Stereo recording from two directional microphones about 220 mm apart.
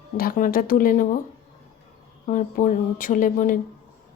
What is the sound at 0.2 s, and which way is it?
Speech, 40° left (ahead or behind).